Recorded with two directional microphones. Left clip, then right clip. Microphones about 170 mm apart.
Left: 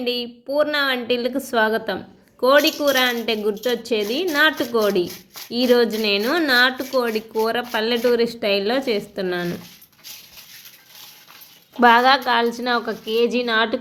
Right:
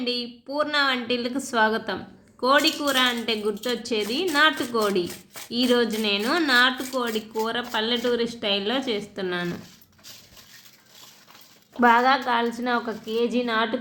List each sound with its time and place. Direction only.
0.0 s a woman's voice: 25° left (ahead or behind)
11.8 s a woman's voice: 50° left (ahead or behind)